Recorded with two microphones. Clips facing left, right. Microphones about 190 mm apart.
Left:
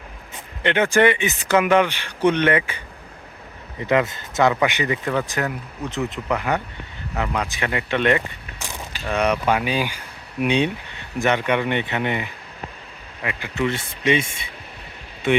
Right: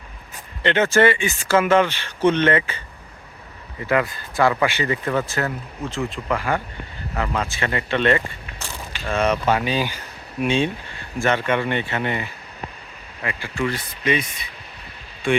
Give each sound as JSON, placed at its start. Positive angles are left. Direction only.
{"t": 0.6, "sound": "speech", "side_deg": 15}